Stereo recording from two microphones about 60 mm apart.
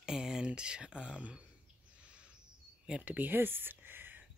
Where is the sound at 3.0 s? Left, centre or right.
Right.